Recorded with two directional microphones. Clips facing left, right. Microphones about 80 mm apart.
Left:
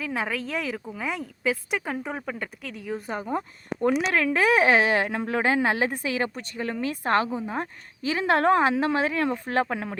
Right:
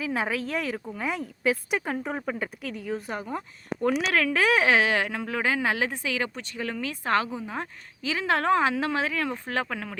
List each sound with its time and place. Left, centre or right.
0.0 s a woman's voice: centre
3.1 s speech: left
4.6 s speech: left
7.3 s a woman's voice: centre
8.1 s speech: left